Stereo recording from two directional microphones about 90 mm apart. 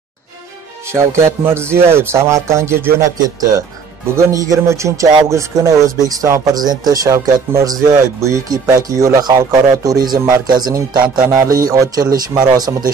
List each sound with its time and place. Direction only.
0.9 s speech: 30° right (ahead or behind)
3.2 s speech: 45° right (ahead or behind)
4.1 s speech: 35° right (ahead or behind)
6.5 s speech: 45° right (ahead or behind)
11.2 s speech: 35° right (ahead or behind)